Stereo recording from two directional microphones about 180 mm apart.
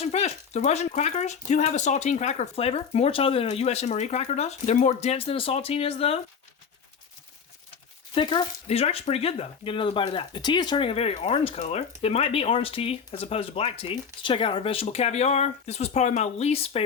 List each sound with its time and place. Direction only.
0.0 s speech: 35° left (ahead or behind)
8.1 s speech: 25° left (ahead or behind)